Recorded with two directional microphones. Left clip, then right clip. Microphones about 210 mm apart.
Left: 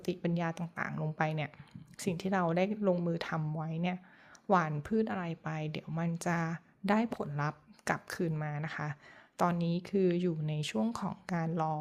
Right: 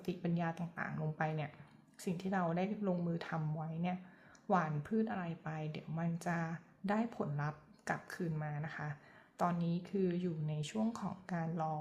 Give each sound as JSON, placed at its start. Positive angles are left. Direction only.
{"t": 0.0, "sound": "speech", "side_deg": 35}